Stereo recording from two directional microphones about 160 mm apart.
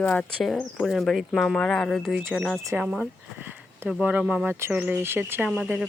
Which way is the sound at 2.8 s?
Centre (ahead or behind).